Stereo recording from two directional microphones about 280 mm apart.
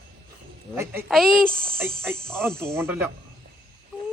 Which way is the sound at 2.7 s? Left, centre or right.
Centre.